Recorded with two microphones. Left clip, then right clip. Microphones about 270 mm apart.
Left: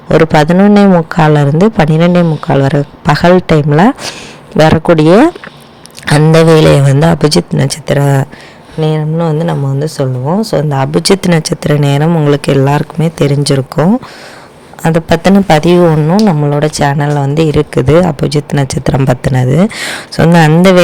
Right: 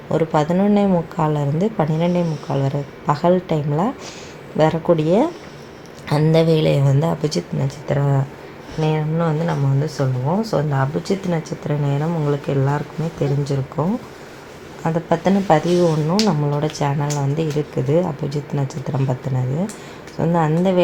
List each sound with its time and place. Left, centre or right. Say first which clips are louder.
0.1 s speech: left 11 dB; left